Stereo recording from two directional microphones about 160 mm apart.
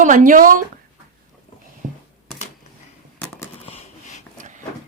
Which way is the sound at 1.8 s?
55° right (ahead or behind).